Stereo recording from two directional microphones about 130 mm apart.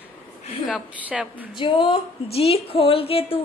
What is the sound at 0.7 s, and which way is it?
Speech, 10° right (ahead or behind).